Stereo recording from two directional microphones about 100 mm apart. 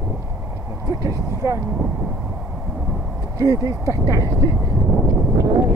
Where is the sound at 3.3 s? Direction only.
35° right (ahead or behind).